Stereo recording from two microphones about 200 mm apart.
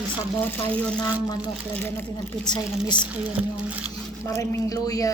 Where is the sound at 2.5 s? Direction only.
20° left (ahead or behind).